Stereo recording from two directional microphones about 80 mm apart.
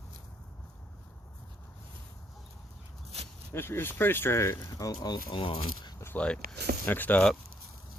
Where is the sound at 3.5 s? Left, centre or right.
Left.